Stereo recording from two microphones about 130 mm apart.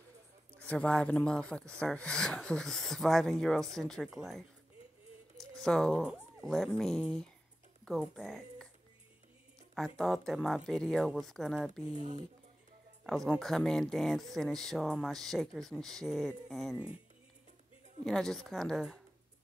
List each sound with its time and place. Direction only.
0.6 s speech: 10° left (ahead or behind)
5.5 s speech: 5° left (ahead or behind)
9.8 s speech: 5° left (ahead or behind)
11.9 s speech: 55° right (ahead or behind)
13.0 s speech: centre (ahead or behind)
18.0 s speech: 5° left (ahead or behind)